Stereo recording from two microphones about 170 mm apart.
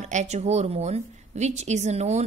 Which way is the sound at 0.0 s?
40° right (ahead or behind).